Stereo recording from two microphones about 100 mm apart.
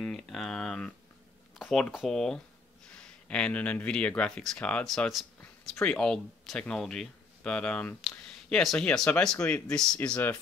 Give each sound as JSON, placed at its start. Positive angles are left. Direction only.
{"t": 0.0, "sound": "speech", "side_deg": 5}